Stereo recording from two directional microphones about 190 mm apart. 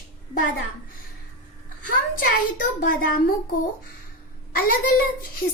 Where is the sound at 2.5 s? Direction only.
45° left (ahead or behind).